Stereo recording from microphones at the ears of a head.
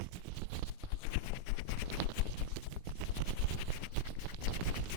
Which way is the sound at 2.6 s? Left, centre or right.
Right.